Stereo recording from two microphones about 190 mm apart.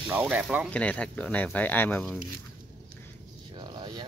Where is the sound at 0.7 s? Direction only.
5° left (ahead or behind).